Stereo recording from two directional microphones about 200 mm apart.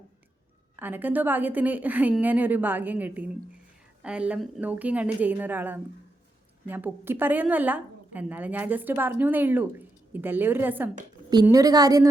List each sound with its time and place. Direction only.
0.8 s a woman's voice: 10° right (ahead or behind)